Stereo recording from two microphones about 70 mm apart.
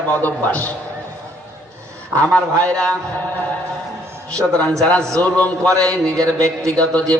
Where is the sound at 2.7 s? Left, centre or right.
Centre.